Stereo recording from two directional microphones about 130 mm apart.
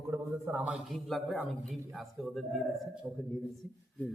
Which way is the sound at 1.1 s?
5° left (ahead or behind).